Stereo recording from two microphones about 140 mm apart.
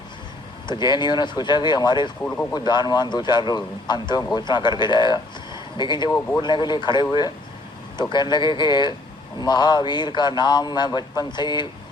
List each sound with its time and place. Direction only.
0.7 s a man's voice: 30° left (ahead or behind)
2.2 s speech: 10° left (ahead or behind)
2.5 s a man's voice: 30° left (ahead or behind)
6.1 s speech: 15° left (ahead or behind)
6.4 s a man's voice: 30° left (ahead or behind)